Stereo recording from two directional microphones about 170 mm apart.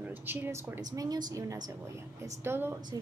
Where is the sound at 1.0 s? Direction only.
25° right (ahead or behind).